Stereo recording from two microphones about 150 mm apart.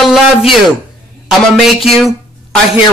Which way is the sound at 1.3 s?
Centre (ahead or behind).